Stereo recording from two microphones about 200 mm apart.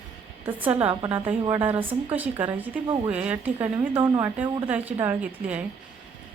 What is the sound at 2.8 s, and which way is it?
Speech, 20° right (ahead or behind).